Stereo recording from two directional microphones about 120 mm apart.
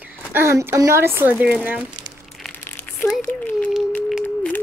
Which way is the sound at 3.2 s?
15° left (ahead or behind).